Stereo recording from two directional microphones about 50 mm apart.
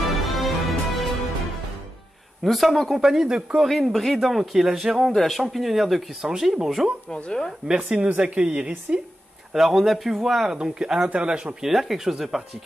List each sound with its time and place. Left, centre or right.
0.4 s music: centre
2.4 s speech: centre
3.8 s speech: centre
5.0 s speech: centre
7.1 s speech: centre
7.6 s a woman's voice: centre
9.5 s speech: centre
10.6 s a woman's voice: centre
11.6 s speech: centre